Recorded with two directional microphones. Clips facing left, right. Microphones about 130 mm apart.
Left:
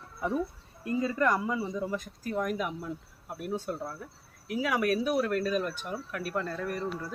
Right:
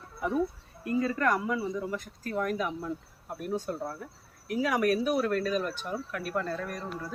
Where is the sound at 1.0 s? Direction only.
20° left (ahead or behind).